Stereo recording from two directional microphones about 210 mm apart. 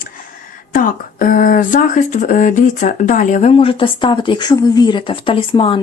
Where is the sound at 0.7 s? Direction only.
40° left (ahead or behind).